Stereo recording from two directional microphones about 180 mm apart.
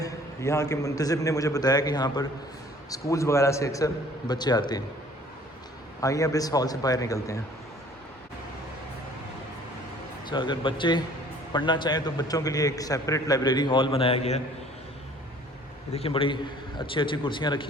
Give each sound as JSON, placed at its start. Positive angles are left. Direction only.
{"t": 0.0, "sound": "a man's voice", "side_deg": 15}
{"t": 6.0, "sound": "a man's voice", "side_deg": 20}
{"t": 10.2, "sound": "a man's voice", "side_deg": 25}
{"t": 15.9, "sound": "a man's voice", "side_deg": 35}